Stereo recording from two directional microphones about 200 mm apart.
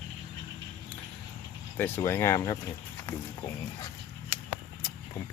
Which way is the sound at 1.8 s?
10° left (ahead or behind).